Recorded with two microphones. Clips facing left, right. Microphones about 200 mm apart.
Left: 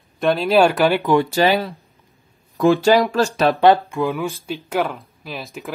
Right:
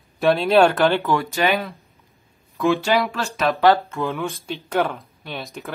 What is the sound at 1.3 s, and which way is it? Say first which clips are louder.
Speech: left 4 dB; 30° left (ahead or behind).